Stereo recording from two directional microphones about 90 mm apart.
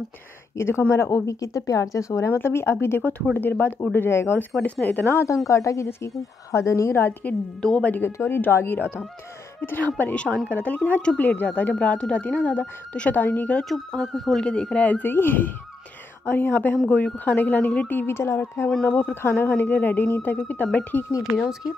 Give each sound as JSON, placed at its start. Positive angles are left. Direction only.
{"t": 0.6, "sound": "a woman's voice", "side_deg": 30}
{"t": 7.6, "sound": "speech", "side_deg": 15}
{"t": 13.6, "sound": "speech", "side_deg": 5}